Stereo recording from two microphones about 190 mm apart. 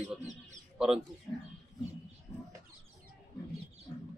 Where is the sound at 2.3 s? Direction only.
15° left (ahead or behind).